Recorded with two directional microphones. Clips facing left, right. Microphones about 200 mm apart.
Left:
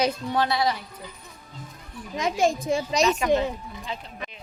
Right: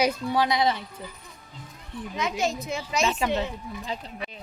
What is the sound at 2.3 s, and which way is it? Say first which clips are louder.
Speech: left 9 dB; 30° left (ahead or behind).